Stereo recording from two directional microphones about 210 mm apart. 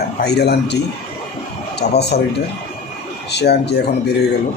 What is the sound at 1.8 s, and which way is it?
Speech, 50° left (ahead or behind).